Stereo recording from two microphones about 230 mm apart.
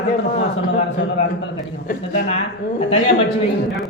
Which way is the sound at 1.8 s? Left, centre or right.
Left.